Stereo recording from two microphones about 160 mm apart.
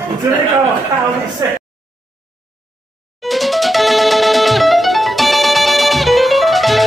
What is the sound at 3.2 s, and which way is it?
Music, centre (ahead or behind).